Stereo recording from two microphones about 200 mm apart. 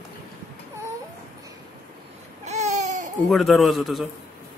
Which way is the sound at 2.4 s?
35° right (ahead or behind).